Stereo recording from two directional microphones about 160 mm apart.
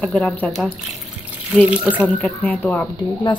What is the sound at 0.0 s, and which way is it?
Speech, 5° left (ahead or behind).